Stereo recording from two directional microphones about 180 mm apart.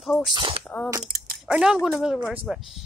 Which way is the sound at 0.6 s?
5° left (ahead or behind).